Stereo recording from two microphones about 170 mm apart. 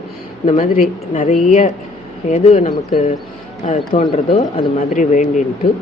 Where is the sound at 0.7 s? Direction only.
55° left (ahead or behind).